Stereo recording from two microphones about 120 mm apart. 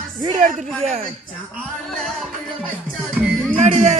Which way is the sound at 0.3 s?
70° right (ahead or behind).